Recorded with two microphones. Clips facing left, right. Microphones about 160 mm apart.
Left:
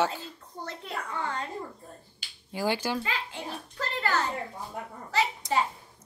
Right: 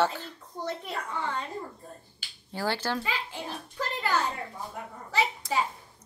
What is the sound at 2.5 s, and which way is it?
Speech, 10° left (ahead or behind).